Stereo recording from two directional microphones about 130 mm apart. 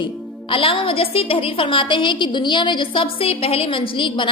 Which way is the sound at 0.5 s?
45° left (ahead or behind).